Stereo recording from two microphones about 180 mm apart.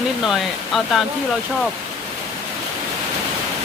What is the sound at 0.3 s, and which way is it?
Speech, centre (ahead or behind).